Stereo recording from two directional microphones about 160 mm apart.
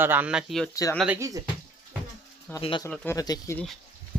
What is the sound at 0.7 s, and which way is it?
Speech, 20° left (ahead or behind).